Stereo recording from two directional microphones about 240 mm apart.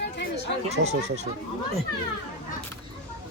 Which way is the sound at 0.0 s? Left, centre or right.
Left.